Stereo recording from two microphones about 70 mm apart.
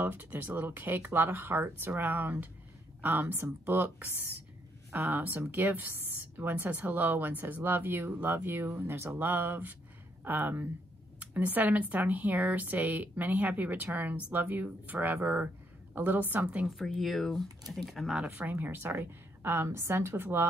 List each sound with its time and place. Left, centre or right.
0.0 s a woman's voice: right
16.6 s speech: centre
18.3 s a woman's voice: right